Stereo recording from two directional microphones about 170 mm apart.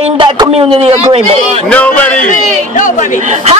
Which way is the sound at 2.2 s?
50° left (ahead or behind).